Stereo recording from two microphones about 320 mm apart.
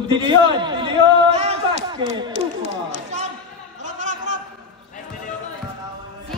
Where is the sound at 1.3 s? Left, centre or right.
Centre.